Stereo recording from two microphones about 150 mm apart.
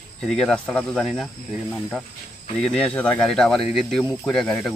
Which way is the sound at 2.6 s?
5° left (ahead or behind).